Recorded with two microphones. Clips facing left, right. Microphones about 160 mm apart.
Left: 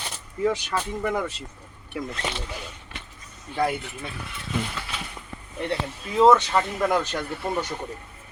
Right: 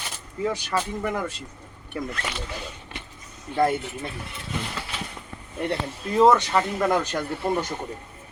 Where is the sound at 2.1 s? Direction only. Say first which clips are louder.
Left 1 dB; 25° left (ahead or behind).